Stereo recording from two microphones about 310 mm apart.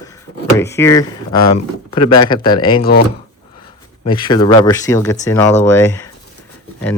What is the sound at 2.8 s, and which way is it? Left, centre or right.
Speech, left.